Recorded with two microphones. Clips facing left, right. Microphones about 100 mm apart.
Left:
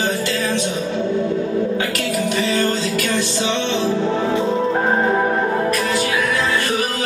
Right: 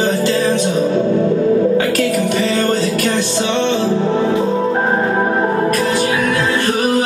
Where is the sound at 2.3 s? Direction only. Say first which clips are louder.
Right 3 dB; 45° right (ahead or behind).